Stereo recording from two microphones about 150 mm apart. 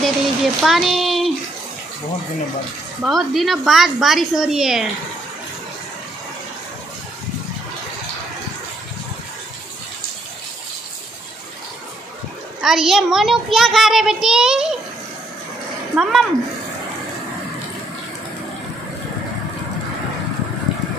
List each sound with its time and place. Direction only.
0.0 s speech: centre (ahead or behind)
3.0 s a child's voice: centre (ahead or behind)
12.6 s a child's voice: centre (ahead or behind)
16.0 s a child's voice: centre (ahead or behind)